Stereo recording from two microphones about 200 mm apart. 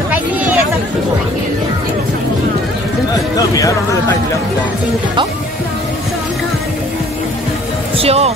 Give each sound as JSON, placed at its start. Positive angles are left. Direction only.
{"t": 8.0, "sound": "music", "side_deg": -30}